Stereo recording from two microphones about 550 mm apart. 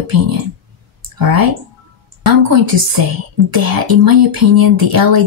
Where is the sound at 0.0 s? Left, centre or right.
Right.